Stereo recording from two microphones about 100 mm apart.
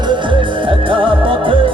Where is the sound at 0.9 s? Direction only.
60° right (ahead or behind).